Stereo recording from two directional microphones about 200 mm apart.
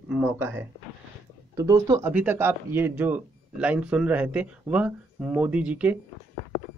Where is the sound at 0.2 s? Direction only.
10° right (ahead or behind).